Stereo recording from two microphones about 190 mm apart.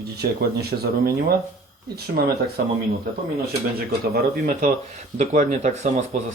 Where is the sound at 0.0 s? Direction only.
55° right (ahead or behind).